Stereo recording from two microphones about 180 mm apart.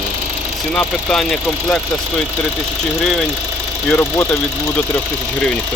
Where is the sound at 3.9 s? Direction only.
10° left (ahead or behind).